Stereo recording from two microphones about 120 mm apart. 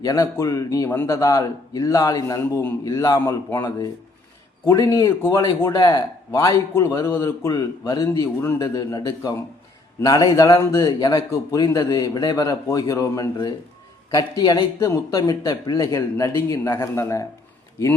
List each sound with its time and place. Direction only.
0.0 s a man's voice: 30° left (ahead or behind)